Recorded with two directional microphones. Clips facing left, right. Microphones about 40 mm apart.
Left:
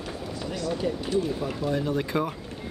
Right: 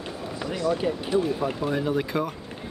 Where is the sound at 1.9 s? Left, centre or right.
Centre.